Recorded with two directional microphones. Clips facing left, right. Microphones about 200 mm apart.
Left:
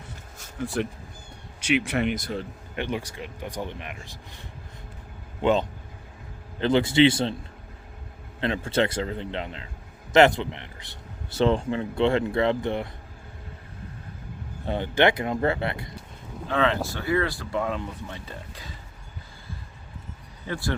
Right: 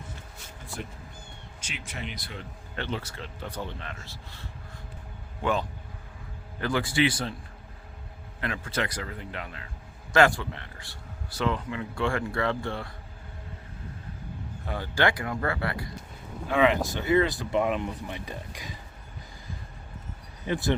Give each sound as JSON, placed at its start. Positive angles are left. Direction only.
{"t": 0.6, "sound": "speech", "side_deg": 75}
{"t": 2.7, "sound": "a man's voice", "side_deg": 15}
{"t": 8.4, "sound": "a man's voice", "side_deg": 25}
{"t": 14.7, "sound": "a man's voice", "side_deg": 20}
{"t": 16.5, "sound": "speech", "side_deg": -15}
{"t": 20.5, "sound": "speech", "side_deg": -20}